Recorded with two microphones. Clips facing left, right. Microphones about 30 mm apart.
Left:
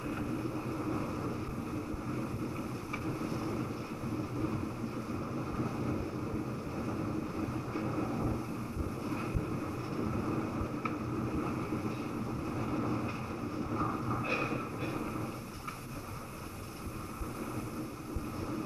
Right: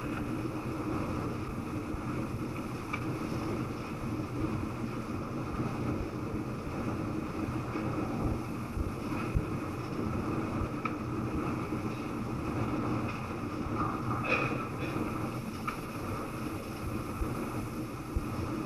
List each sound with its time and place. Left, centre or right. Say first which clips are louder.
12.7 s vehicle: left 1 dB; right
13.7 s train: right 1 dB; right
14.2 s train: right 5 dB; right
15.0 s vehicle: right 3 dB; right